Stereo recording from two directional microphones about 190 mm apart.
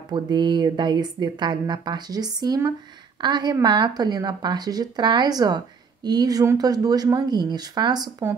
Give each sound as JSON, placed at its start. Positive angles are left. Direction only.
{"t": 0.1, "sound": "speech", "side_deg": -25}